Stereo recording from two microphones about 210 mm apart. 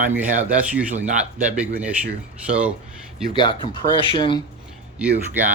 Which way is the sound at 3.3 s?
20° left (ahead or behind).